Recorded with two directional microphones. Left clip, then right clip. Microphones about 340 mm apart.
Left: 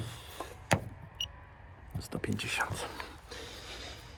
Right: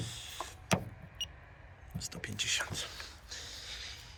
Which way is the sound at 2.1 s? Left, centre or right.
Centre.